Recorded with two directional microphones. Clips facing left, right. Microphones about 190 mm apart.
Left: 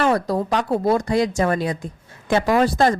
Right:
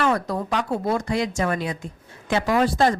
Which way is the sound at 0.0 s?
35° left (ahead or behind).